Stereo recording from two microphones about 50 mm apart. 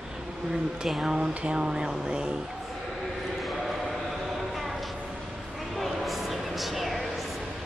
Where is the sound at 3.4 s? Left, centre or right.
Centre.